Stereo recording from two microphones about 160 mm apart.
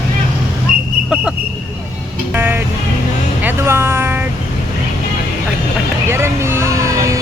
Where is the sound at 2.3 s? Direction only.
10° right (ahead or behind).